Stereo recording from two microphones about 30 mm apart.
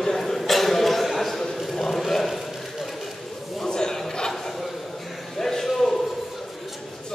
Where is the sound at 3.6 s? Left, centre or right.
Left.